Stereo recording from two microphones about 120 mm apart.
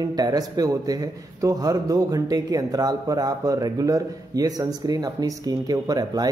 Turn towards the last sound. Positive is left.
turn(degrees=-30)  # may be behind; listen again after turning